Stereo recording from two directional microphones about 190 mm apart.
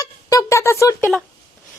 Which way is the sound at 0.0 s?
20° left (ahead or behind).